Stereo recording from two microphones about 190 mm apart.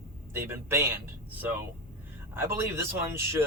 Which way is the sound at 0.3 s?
10° right (ahead or behind).